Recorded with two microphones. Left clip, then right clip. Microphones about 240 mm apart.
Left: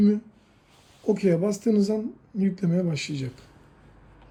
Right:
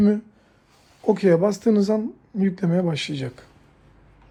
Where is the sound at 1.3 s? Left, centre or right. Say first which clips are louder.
Right 6 dB; right.